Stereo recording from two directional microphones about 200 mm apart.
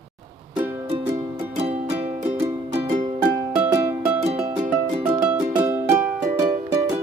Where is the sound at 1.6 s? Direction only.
30° right (ahead or behind).